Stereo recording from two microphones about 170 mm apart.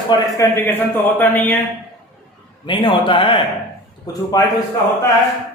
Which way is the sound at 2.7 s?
30° left (ahead or behind).